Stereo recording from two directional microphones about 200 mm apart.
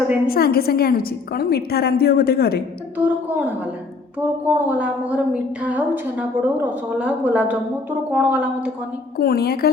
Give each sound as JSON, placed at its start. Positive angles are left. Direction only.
{"t": 0.3, "sound": "a woman's voice", "side_deg": 50}
{"t": 3.0, "sound": "a woman's voice", "side_deg": -10}
{"t": 9.1, "sound": "a woman's voice", "side_deg": 50}